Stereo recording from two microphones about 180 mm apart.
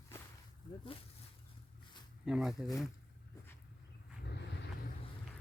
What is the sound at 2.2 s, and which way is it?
Speech, 5° right (ahead or behind).